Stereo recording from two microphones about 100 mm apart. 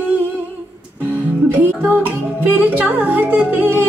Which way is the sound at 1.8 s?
15° right (ahead or behind).